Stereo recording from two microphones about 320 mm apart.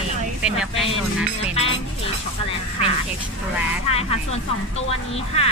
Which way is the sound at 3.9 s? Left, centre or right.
Centre.